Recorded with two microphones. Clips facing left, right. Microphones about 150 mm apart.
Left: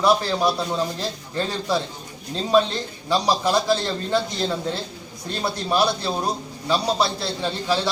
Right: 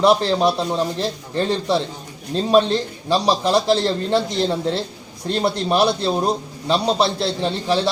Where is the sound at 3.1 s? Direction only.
25° right (ahead or behind).